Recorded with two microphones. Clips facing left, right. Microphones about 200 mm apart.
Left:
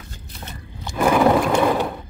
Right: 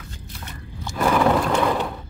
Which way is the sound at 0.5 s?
15° left (ahead or behind).